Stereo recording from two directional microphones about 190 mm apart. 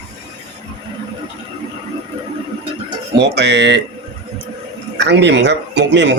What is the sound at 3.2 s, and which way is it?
Speech, 65° right (ahead or behind).